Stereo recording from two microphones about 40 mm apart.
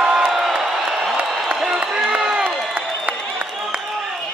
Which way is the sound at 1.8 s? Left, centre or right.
Right.